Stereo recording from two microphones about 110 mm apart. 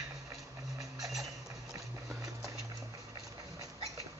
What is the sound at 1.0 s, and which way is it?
Music, centre (ahead or behind).